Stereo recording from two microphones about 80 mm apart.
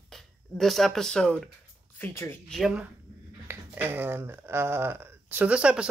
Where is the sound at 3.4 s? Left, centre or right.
Right.